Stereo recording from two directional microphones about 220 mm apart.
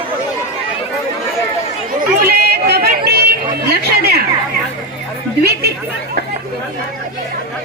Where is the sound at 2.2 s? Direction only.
45° right (ahead or behind).